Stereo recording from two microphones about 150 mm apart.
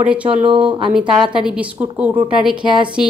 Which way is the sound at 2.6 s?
30° right (ahead or behind).